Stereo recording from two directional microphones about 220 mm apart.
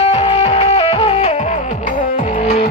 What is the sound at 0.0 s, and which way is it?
Music, 25° left (ahead or behind).